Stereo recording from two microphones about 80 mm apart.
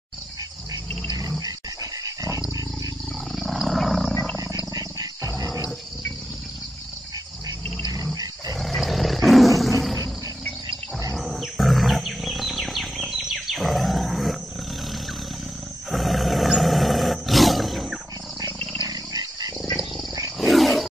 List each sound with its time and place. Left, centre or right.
1.4 s dog: right
3.3 s wild animals: centre
4.7 s wild animals: right
7.9 s roar: right
8.5 s roar: centre
11.1 s wild animals: centre
15.9 s roar: centre
18.8 s dog: right
20.3 s wild animals: centre